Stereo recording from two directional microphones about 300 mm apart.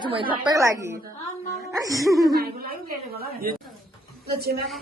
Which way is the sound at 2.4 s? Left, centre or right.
Right.